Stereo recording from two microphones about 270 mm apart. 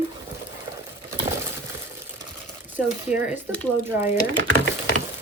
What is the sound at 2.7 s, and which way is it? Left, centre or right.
Speech, centre.